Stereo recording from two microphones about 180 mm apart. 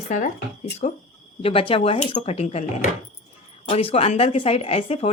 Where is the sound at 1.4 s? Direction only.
30° left (ahead or behind).